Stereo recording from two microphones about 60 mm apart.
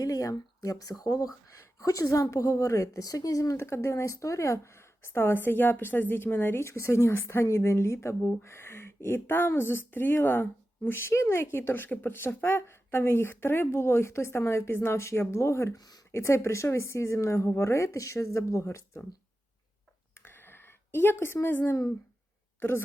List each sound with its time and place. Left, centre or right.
0.0 s speech: left
1.5 s a woman's voice: left
3.6 s a woman's voice: left
20.1 s a sound: left
21.4 s speech: left